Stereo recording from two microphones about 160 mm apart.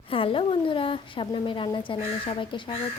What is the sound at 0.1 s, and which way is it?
A woman's voice, 35° left (ahead or behind).